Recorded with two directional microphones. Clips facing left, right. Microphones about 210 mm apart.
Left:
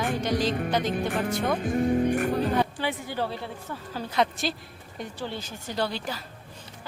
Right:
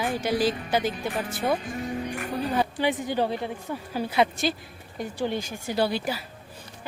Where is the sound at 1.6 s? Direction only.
50° left (ahead or behind).